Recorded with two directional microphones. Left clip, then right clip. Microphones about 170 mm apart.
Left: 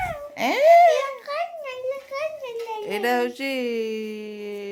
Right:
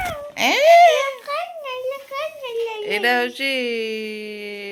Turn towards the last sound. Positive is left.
turn(degrees=20)  # may be behind; listen again after turning